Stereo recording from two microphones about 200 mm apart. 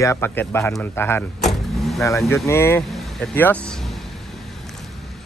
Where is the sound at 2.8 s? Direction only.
Centre (ahead or behind).